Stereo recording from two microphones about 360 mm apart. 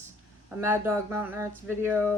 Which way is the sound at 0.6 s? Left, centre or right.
Centre.